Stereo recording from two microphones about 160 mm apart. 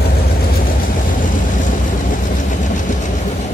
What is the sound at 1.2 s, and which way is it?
Vehicle, 55° left (ahead or behind).